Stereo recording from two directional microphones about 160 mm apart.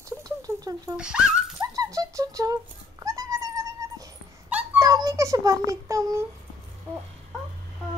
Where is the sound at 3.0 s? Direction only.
20° right (ahead or behind).